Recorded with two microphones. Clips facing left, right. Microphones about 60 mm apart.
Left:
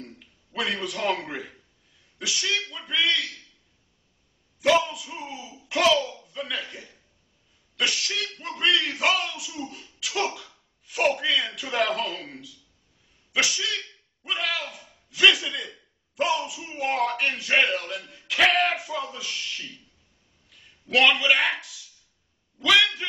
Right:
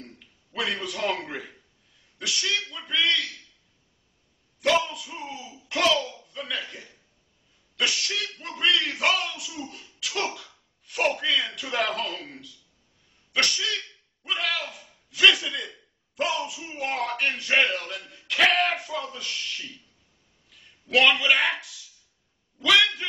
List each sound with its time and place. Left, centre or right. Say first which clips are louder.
0.0 s speech: left 3 dB; centre
4.6 s speech: left 2 dB; centre
5.4 s a child's voice: left 1 dB; left
5.7 s speech: left 2 dB; centre
5.9 s speech: left 2 dB; left
6.2 s speech: left 1 dB; centre
9.9 s cough: left 2 dB; centre
10.9 s speech: left 1 dB; centre